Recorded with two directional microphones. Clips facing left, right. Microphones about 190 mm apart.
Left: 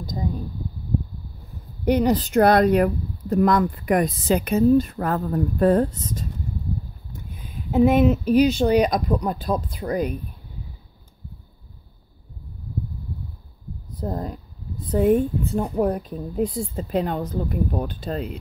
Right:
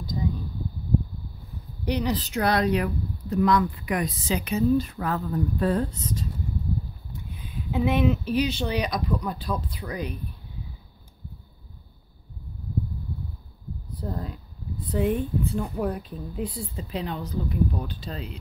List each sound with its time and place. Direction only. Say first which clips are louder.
0.0 s a sound: left 1 dB; 45° left (ahead or behind)
1.9 s speech: left 7 dB; 50° left (ahead or behind)
7.7 s speech: left 6 dB; 45° left (ahead or behind)
13.9 s speech: left 5 dB; 45° left (ahead or behind)